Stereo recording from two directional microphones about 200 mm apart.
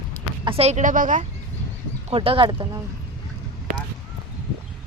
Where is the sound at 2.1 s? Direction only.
25° right (ahead or behind).